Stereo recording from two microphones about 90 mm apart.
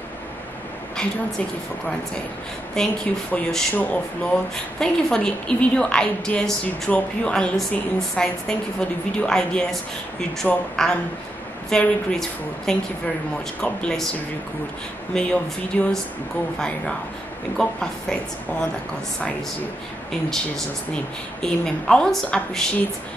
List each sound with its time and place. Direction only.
2.7 s a woman's voice: 5° left (ahead or behind)
15.1 s a woman's voice: 15° left (ahead or behind)
20.1 s a woman's voice: 5° left (ahead or behind)